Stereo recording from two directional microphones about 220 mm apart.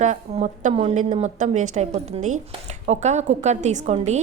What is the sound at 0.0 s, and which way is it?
A woman's voice, 35° right (ahead or behind).